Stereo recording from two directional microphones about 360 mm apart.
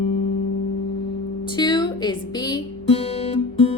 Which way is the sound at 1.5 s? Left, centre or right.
Centre.